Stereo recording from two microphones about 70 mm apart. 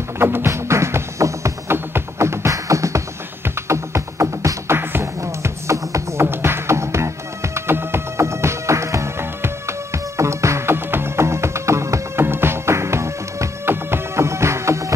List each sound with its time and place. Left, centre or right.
0.2 s music: right